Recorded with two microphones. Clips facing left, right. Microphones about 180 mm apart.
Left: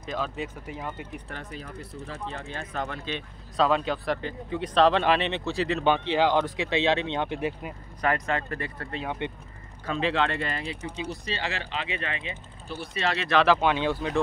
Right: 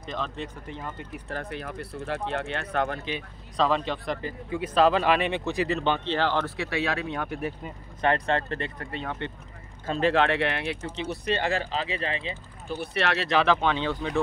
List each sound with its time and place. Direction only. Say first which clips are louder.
0.0 s speech: left 2 dB; 5° left (ahead or behind)
1.3 s speech: right 5 dB; 65° right (ahead or behind)
3.5 s speech: left 1 dB; centre (ahead or behind); by 5.7 s 15° right (ahead or behind)
6.0 s speech: left 3 dB; 15° left (ahead or behind)
8.0 s speech: right 2 dB; 30° right (ahead or behind)
9.2 s speech: left 2 dB; 15° left (ahead or behind)
9.8 s speech: right 3 dB; 45° right (ahead or behind)
10.1 s speech: right 4 dB; 70° right (ahead or behind)
11.1 s speech: right 9 dB; 55° right (ahead or behind)
11.7 s speech: right 3 dB; 35° right (ahead or behind)
12.7 s speech: right 2 dB; 65° right (ahead or behind)
13.4 s speech: left 3 dB; 5° left (ahead or behind)